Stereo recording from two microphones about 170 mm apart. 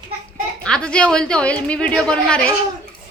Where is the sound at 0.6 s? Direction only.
5° left (ahead or behind).